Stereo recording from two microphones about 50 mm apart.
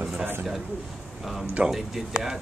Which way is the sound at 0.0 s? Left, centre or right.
Right.